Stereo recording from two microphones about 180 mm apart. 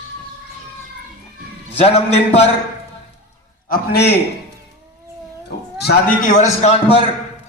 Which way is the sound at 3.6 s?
60° left (ahead or behind).